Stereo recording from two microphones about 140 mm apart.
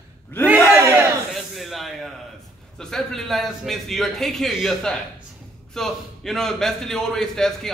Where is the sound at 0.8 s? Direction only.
20° right (ahead or behind).